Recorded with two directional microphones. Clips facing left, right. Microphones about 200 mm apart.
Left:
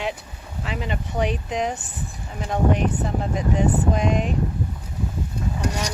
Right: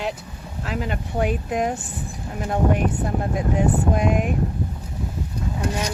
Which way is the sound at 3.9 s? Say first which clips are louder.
Right 1 dB; 5° right (ahead or behind).